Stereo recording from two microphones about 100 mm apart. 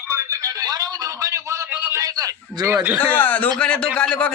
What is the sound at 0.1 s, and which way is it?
A man's voice, 30° right (ahead or behind).